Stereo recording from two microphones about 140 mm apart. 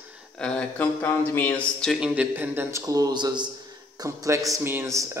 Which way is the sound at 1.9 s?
5° right (ahead or behind).